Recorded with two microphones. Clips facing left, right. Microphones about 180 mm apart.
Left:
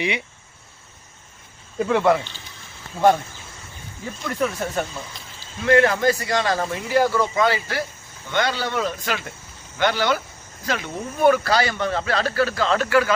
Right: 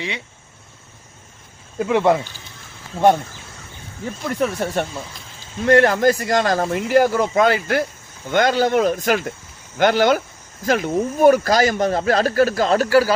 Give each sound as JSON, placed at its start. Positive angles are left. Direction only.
{"t": 1.9, "sound": "speech", "side_deg": -20}
{"t": 4.4, "sound": "a man's voice", "side_deg": -30}